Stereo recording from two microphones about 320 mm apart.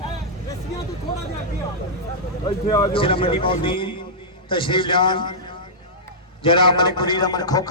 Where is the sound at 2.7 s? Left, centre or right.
Centre.